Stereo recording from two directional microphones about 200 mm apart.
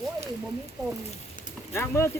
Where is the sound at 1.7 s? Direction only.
15° left (ahead or behind).